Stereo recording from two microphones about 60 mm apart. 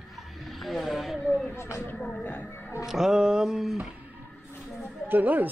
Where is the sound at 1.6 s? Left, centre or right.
Left.